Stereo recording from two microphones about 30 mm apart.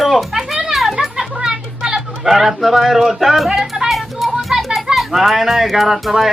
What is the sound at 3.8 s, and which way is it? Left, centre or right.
Music, centre.